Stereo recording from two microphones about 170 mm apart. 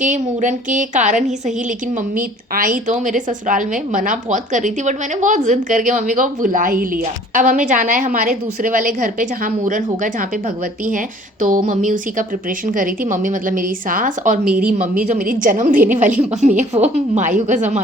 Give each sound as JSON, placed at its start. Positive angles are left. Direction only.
{"t": 0.0, "sound": "a woman's voice", "side_deg": -45}
{"t": 14.4, "sound": "speech", "side_deg": -10}
{"t": 14.7, "sound": "a woman's voice", "side_deg": -50}